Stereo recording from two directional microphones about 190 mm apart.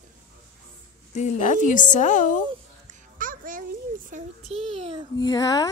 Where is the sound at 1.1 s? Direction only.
40° left (ahead or behind).